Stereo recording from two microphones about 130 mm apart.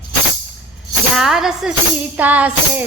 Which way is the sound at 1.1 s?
5° right (ahead or behind).